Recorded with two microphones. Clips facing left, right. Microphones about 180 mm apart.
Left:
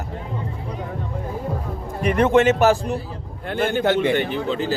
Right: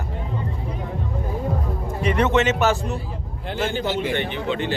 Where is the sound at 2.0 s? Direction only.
50° left (ahead or behind).